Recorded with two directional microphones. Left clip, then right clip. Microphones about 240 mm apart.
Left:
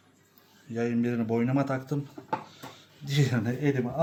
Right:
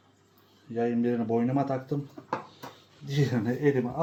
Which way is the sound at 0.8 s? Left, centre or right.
Left.